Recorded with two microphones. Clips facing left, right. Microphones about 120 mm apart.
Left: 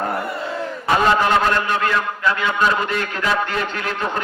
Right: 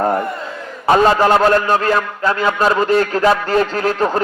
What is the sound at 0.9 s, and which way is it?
A man's voice, 40° right (ahead or behind).